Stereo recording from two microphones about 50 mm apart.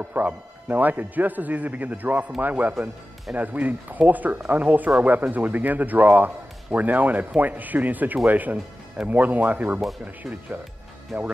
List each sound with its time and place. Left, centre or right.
0.0 s a man's voice: right